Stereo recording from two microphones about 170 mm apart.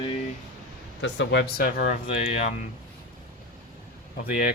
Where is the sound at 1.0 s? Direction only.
85° left; by 1.9 s 60° left (ahead or behind).